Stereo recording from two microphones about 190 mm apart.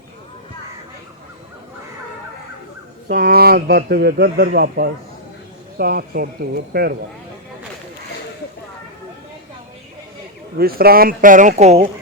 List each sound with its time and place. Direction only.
3.1 s a man's voice: 55° right (ahead or behind)
10.6 s a man's voice: 55° right (ahead or behind); by 11.9 s 35° right (ahead or behind)